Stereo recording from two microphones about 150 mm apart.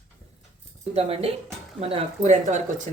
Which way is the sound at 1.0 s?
40° right (ahead or behind).